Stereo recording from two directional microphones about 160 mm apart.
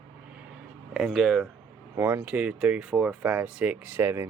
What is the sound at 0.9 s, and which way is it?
Speech, centre (ahead or behind).